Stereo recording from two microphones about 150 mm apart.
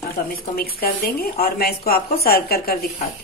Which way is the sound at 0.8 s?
85° left.